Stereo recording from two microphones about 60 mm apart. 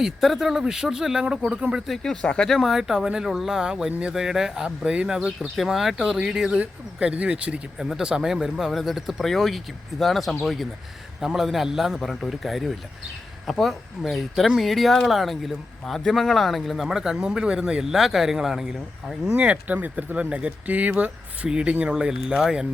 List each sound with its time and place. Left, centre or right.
0.0 s speech: centre
2.0 s speech: centre
2.5 s speech: centre
5.4 s speech: centre
7.8 s speech: centre
17.9 s speech: centre
19.4 s speech: right; by 22.6 s centre